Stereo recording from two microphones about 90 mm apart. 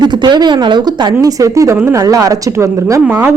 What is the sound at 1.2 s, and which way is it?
A man's voice, 40° right (ahead or behind).